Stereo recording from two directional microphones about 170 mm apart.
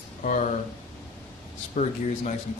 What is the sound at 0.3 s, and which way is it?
Speech, 45° left (ahead or behind).